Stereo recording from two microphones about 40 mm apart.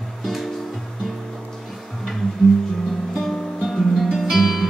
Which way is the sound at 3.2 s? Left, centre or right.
Centre.